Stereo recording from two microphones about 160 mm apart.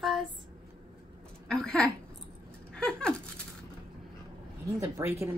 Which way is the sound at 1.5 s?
5° left (ahead or behind).